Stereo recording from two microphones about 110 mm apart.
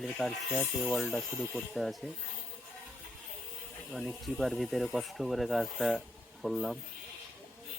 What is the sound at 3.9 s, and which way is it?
Speech, centre (ahead or behind).